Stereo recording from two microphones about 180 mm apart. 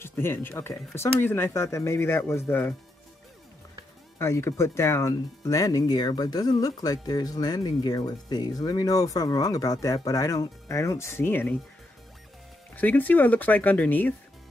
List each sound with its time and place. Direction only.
0.0 s speech: 15° left (ahead or behind)
4.2 s speech: 15° left (ahead or behind)
12.7 s speech: 10° left (ahead or behind)